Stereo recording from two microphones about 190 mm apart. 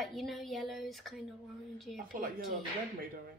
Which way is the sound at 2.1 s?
50° right (ahead or behind).